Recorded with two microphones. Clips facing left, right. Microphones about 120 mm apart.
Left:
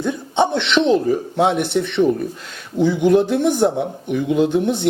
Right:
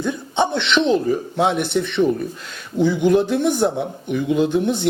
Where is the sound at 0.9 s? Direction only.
40° left (ahead or behind).